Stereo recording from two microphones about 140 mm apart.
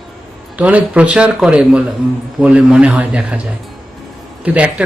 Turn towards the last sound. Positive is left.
turn(degrees=-10)  # may be behind; listen again after turning